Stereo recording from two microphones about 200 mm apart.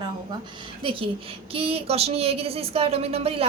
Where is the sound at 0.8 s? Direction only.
25° right (ahead or behind).